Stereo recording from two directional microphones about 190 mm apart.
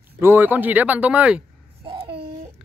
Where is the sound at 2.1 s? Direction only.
60° right (ahead or behind).